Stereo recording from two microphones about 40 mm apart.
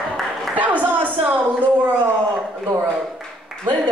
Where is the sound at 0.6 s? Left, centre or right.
Right.